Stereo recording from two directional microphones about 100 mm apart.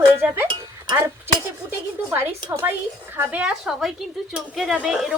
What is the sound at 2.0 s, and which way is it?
A woman's voice, 20° right (ahead or behind).